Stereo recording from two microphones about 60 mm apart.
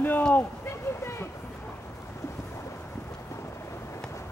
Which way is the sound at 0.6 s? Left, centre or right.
Left.